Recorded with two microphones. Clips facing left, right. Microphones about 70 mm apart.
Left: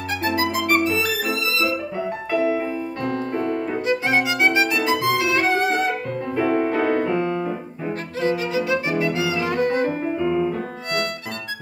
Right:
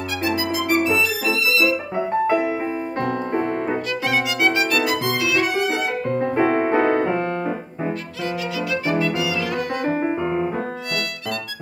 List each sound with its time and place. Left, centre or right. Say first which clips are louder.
0.4 s music: left 1 dB; left
2.0 s music: right 5 dB; right
3.0 s music: right 3 dB; right
3.8 s violin: left 2 dB; left
5.9 s music: right 3 dB; right
7.2 s piano: even; right
8.2 s violin: left 6 dB; left
9.0 s music: even; left
9.8 s piano: right 1 dB; right